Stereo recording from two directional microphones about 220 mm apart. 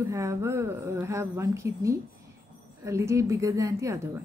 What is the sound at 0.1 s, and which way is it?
Speech, 15° right (ahead or behind).